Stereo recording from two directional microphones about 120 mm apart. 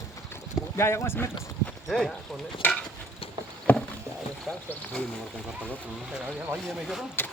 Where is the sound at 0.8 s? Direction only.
20° left (ahead or behind).